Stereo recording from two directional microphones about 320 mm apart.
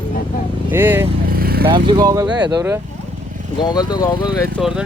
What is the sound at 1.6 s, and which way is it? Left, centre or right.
Speech, centre.